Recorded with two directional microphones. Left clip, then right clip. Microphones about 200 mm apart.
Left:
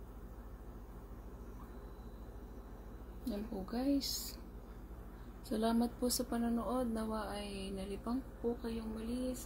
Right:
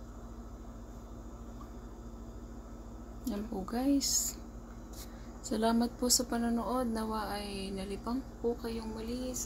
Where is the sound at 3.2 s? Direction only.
5° right (ahead or behind).